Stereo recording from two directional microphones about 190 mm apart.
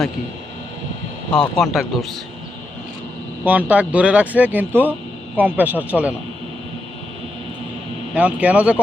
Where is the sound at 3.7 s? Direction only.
5° right (ahead or behind).